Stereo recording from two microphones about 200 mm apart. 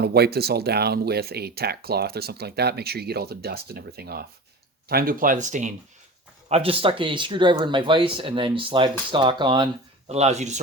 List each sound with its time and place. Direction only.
0.0 s speech: 50° right (ahead or behind)
6.5 s speech: 30° right (ahead or behind)
10.1 s speech: 35° right (ahead or behind)